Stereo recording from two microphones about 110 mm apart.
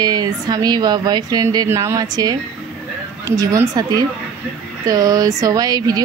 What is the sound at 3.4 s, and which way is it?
A woman's voice, 35° right (ahead or behind).